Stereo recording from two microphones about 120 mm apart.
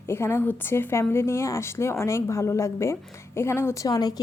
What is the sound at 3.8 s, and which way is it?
Speech, 30° left (ahead or behind).